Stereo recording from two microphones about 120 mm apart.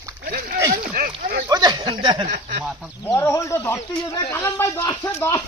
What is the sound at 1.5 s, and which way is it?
Speech, 35° right (ahead or behind).